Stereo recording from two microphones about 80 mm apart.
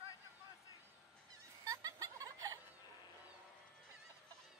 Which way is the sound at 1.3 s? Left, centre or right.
Right.